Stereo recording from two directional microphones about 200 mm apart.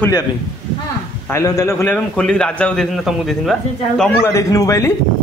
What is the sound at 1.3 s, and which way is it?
A man's voice, 15° left (ahead or behind).